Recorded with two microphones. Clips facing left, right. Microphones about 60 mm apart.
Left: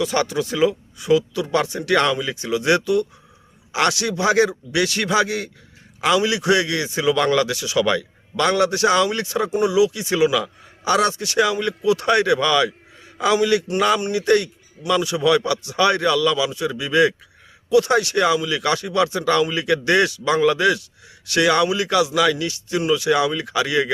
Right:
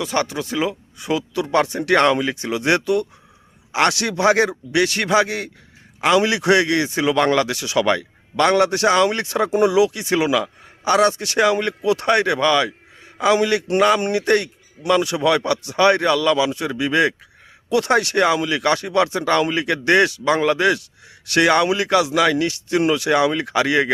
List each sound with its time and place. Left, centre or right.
0.0 s speech: right
0.9 s a man's voice: right
6.1 s a man's voice: right
9.0 s speech: right
9.5 s speech: right
9.7 s a man's voice: right
11.2 s speech: right
12.0 s a man's voice: right
17.7 s a man's voice: right